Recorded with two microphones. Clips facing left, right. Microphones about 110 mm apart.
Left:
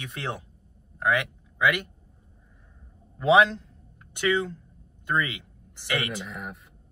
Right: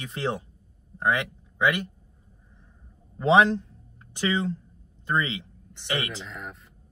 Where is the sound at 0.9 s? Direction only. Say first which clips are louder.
Even; 25° right (ahead or behind).